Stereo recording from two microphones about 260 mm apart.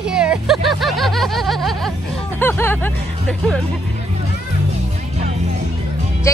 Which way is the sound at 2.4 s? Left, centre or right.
Centre.